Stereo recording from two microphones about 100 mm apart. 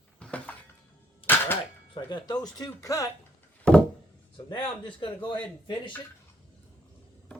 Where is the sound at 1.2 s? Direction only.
60° left (ahead or behind).